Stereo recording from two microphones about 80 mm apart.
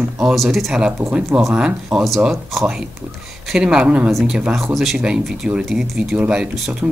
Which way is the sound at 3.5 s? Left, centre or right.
Centre.